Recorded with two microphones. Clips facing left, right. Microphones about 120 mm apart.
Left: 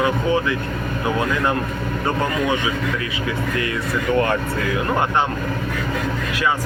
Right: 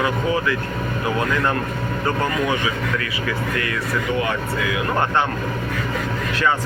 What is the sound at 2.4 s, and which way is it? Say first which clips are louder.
Speech: left 1 dB; 20° left (ahead or behind).